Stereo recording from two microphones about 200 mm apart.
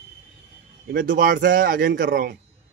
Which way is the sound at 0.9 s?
45° right (ahead or behind).